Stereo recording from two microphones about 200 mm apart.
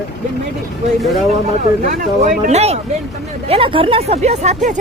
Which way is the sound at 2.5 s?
35° right (ahead or behind).